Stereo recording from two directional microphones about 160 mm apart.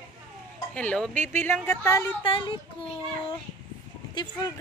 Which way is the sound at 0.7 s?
5° left (ahead or behind).